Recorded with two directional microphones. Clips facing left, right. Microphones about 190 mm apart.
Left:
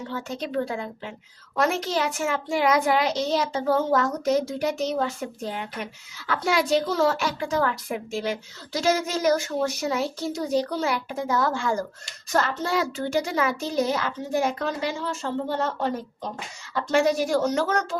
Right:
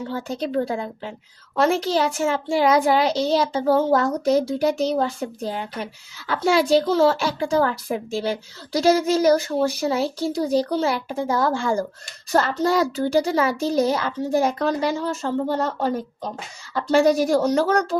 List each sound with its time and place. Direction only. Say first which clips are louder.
0.1 s a child's voice: right 4 dB; 35° right (ahead or behind)